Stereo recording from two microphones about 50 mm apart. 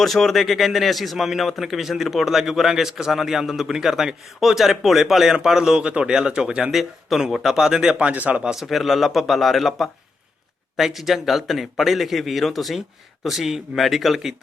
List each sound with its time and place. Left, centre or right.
0.0 s a man's voice: centre
6.7 s a man's voice: centre
7.9 s speech: right
8.6 s a man's voice: centre